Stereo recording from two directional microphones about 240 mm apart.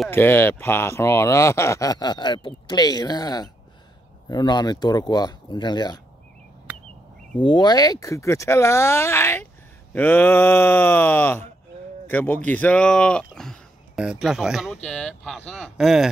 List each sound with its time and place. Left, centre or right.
0.0 s speech: centre
7.4 s speech: centre